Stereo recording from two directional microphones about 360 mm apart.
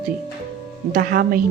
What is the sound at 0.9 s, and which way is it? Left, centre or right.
Speech, right.